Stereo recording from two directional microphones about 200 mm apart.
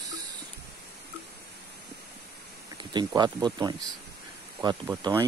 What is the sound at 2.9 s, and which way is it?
Speech, 20° right (ahead or behind).